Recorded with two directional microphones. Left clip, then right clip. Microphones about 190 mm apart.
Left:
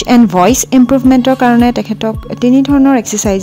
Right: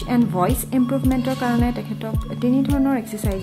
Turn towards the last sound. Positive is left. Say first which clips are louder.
# left 13 dB
turn(degrees=50)  # may be behind; listen again after turning